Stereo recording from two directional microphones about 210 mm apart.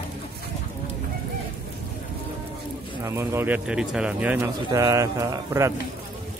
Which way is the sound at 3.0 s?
10° right (ahead or behind).